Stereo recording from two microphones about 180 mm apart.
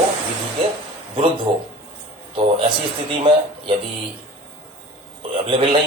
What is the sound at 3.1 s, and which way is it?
Speech, 30° right (ahead or behind).